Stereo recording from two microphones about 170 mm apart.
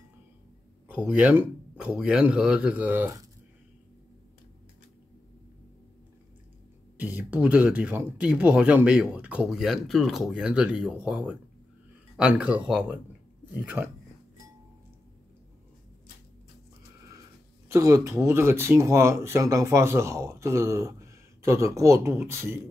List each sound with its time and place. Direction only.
0.8 s speech: 10° right (ahead or behind)
7.0 s speech: 10° right (ahead or behind)
17.7 s speech: 15° right (ahead or behind)